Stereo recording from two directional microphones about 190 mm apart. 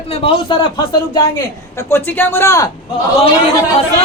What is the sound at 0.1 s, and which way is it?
Speech, 30° left (ahead or behind).